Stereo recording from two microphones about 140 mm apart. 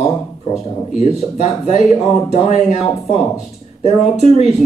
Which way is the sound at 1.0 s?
55° left (ahead or behind).